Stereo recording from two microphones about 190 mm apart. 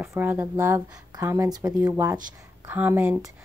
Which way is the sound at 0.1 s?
10° right (ahead or behind).